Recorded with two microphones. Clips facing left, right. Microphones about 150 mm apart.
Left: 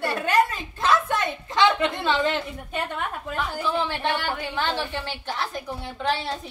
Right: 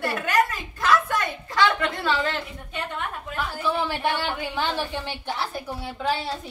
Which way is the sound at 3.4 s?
10° right (ahead or behind).